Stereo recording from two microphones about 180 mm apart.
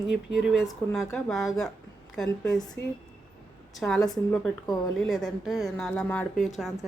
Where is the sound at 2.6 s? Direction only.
20° left (ahead or behind).